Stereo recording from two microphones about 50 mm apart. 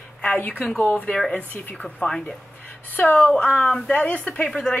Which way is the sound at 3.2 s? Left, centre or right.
Left.